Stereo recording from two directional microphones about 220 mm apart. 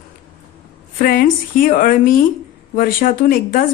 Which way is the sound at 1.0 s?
40° left (ahead or behind).